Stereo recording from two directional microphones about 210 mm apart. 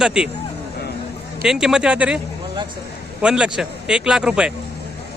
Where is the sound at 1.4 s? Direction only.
Centre (ahead or behind).